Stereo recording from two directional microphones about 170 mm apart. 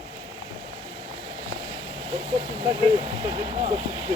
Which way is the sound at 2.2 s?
30° right (ahead or behind).